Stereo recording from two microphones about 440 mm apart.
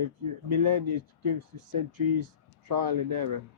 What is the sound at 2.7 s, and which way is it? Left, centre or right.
Speech, right.